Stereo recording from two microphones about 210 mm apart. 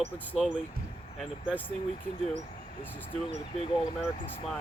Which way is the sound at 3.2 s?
30° left (ahead or behind).